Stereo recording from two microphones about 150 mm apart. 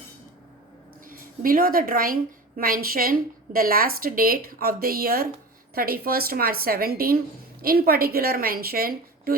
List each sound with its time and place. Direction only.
1.0 s a woman's voice: 70° right (ahead or behind)